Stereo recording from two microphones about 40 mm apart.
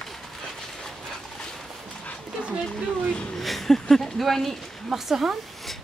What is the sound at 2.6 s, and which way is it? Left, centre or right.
Speech, left.